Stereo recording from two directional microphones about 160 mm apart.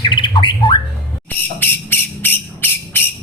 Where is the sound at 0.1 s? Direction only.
30° left (ahead or behind).